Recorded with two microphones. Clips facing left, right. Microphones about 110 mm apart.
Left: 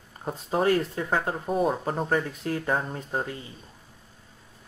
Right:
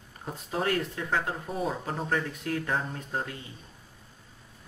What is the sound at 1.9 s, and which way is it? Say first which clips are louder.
Speech: left 4 dB; 30° left (ahead or behind).